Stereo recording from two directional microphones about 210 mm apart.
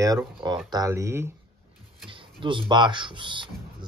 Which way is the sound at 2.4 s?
25° right (ahead or behind).